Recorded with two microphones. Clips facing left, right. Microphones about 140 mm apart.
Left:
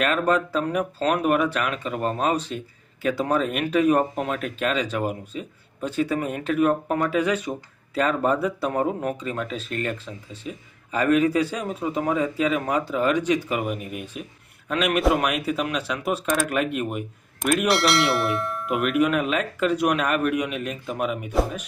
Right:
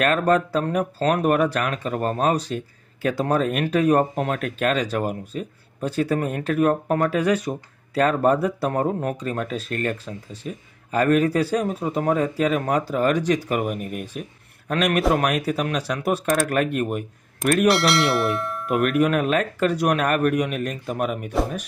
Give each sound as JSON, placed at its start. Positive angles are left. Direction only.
{"t": 0.0, "sound": "speech", "side_deg": -45}
{"t": 17.6, "sound": "speech", "side_deg": 0}
{"t": 18.8, "sound": "speech", "side_deg": -45}